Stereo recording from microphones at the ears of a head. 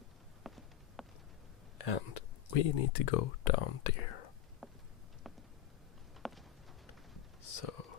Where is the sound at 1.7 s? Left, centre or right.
Left.